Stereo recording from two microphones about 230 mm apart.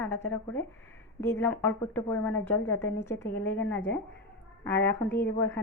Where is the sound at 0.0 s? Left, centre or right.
Centre.